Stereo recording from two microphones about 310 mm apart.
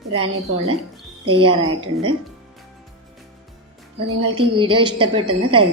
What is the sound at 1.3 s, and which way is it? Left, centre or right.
Speech, centre.